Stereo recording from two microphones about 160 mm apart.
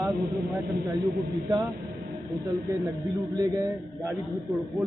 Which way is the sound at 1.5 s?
25° right (ahead or behind).